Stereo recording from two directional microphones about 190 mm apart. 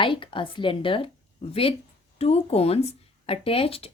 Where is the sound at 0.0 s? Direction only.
25° left (ahead or behind).